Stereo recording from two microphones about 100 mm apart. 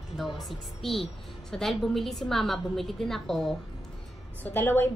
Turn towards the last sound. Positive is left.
turn(degrees=20)  # may be behind; listen again after turning